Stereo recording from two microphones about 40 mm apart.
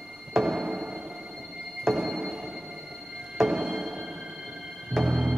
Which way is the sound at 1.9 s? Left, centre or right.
Centre.